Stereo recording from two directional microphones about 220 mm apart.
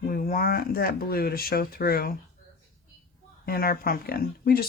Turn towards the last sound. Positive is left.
turn(degrees=45)  # may be behind; listen again after turning